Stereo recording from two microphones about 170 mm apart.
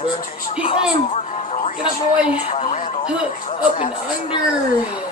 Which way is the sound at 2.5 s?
35° left (ahead or behind).